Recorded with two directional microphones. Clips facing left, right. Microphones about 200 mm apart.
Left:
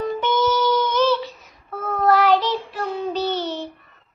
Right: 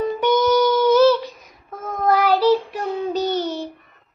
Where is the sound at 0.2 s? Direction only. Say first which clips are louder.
Right 5 dB; 15° right (ahead or behind).